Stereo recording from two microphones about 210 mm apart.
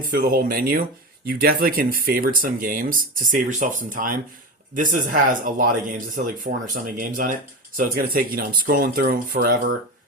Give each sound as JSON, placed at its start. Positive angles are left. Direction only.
{"t": 0.1, "sound": "speech", "side_deg": -45}